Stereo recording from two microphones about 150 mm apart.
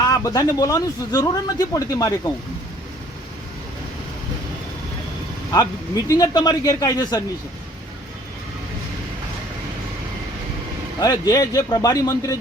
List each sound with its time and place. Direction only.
0.0 s speech: 25° left (ahead or behind)
6.1 s speech: 25° left (ahead or behind)
11.0 s speech: 25° left (ahead or behind)